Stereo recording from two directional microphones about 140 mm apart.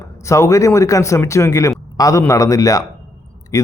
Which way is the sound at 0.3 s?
20° left (ahead or behind).